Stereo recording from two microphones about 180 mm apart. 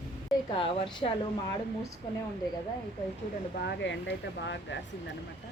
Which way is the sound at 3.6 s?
75° left (ahead or behind).